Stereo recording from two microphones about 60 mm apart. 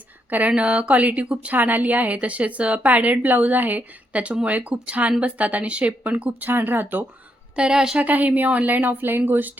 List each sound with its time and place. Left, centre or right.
0.3 s speech: right
6.5 s speech: right
7.5 s a woman's voice: centre
7.9 s speech: right